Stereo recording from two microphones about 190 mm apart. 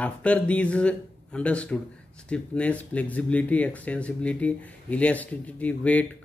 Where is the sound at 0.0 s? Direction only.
5° left (ahead or behind).